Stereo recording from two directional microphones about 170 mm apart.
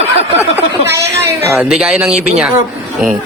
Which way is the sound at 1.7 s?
5° right (ahead or behind).